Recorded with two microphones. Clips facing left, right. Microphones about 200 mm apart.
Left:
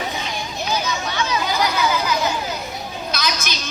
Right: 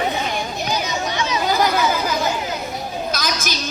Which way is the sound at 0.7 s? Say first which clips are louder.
Left 1 dB; 20° right (ahead or behind).